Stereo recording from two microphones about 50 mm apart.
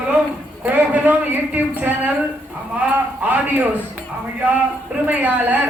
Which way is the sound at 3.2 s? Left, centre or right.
Right.